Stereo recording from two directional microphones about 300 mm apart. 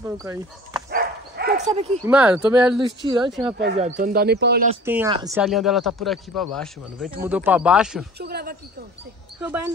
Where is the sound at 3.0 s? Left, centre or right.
Centre; by 4.6 s right.